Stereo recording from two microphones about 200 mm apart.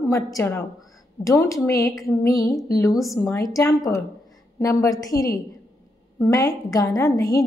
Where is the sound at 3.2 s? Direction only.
15° left (ahead or behind).